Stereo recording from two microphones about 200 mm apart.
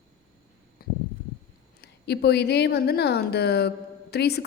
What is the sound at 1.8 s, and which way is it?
A woman's voice, 55° left (ahead or behind).